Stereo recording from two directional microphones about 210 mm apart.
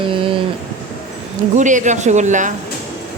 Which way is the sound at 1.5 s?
35° right (ahead or behind).